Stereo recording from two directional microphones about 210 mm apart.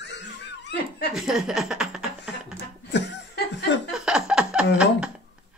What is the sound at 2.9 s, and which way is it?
Chuckle, 55° left (ahead or behind).